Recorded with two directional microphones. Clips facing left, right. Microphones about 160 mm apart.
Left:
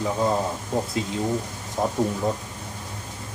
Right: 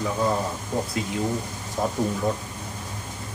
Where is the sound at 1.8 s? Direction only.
25° left (ahead or behind).